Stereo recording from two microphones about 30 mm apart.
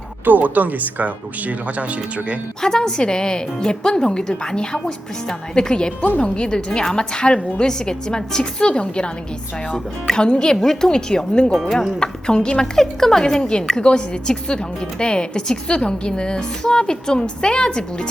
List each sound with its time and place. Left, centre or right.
0.3 s speech: right
2.6 s a woman's voice: left
8.5 s a woman's voice: left
9.7 s a woman's voice: left
11.6 s speech: centre
11.9 s a woman's voice: left
12.7 s a woman's voice: centre; by 18.1 s left